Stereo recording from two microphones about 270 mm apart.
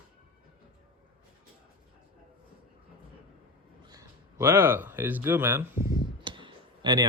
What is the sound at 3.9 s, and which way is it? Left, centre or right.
Speech, centre.